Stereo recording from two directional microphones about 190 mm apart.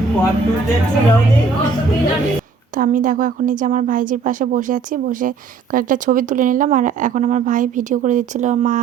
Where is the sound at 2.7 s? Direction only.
45° right (ahead or behind).